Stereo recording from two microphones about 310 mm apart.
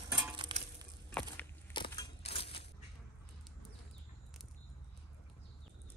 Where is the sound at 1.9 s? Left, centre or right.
Centre.